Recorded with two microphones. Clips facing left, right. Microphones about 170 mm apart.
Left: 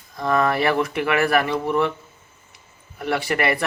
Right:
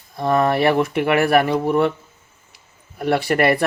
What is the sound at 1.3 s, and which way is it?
Speech, 35° right (ahead or behind).